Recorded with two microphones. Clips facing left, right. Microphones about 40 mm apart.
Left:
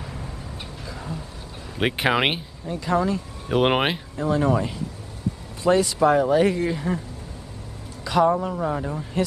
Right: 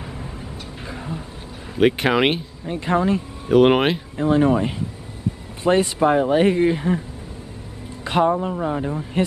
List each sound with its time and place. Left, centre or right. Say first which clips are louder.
1.8 s speech: right 4 dB; centre
2.6 s speech: right 2 dB; right
3.4 s speech: right 6 dB; centre
4.2 s speech: right 4 dB; right
8.0 s speech: right 1 dB; right
8.4 s speech: right 2 dB; centre